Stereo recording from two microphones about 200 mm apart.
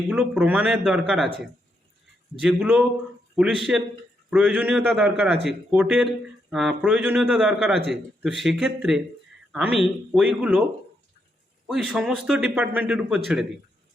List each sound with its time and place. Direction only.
0.1 s speech: 5° right (ahead or behind)
2.4 s a man's voice: 5° right (ahead or behind)
11.6 s speech: 5° right (ahead or behind)